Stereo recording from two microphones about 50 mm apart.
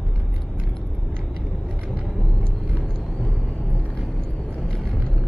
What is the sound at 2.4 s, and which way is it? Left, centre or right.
Vehicle, left.